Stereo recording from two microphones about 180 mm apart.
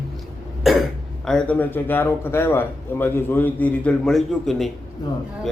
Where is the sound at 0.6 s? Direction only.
Centre (ahead or behind).